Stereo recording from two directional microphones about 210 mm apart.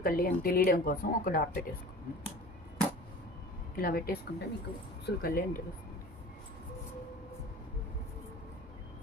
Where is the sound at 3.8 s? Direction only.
45° left (ahead or behind).